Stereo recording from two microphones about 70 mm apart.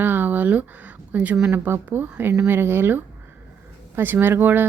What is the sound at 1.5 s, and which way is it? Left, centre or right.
A woman's voice, right.